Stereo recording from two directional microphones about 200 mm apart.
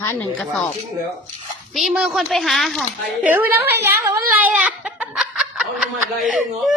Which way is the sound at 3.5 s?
10° right (ahead or behind).